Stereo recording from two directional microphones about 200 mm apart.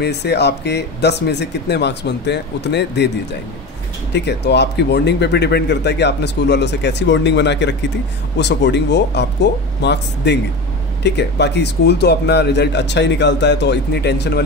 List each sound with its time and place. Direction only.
0.0 s speech: 55° left (ahead or behind)
4.1 s speech: 60° left (ahead or behind)